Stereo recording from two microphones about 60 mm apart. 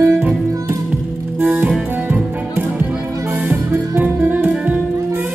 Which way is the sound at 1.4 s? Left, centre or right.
Right.